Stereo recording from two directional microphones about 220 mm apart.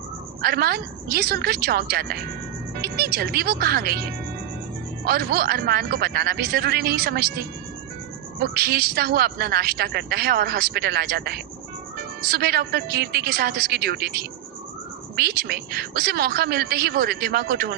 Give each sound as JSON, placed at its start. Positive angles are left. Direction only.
{"t": 0.4, "sound": "speech", "side_deg": -45}
{"t": 5.0, "sound": "speech", "side_deg": -45}
{"t": 8.5, "sound": "speech", "side_deg": -45}